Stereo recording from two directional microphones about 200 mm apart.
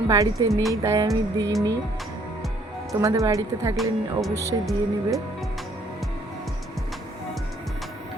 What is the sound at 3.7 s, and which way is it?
Speech, centre (ahead or behind).